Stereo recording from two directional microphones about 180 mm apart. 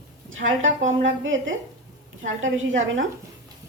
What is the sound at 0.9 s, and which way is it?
Speech, 90° right.